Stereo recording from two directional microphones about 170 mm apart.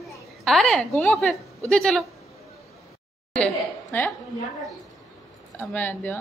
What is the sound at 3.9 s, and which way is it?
Speech, 10° left (ahead or behind).